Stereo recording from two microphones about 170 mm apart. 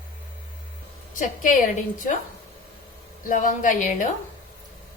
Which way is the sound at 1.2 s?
50° left (ahead or behind).